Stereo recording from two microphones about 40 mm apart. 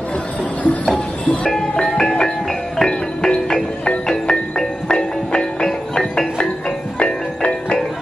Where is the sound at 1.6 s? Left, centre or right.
Centre.